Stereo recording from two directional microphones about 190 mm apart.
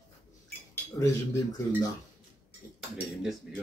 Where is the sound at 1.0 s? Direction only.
15° left (ahead or behind).